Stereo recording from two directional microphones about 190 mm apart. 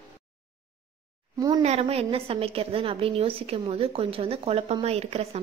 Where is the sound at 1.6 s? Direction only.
35° right (ahead or behind).